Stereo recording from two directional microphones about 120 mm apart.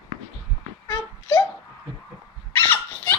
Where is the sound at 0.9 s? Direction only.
30° left (ahead or behind).